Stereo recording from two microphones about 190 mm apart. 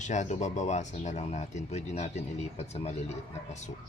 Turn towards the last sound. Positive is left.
turn(degrees=35)  # may be behind; listen again after turning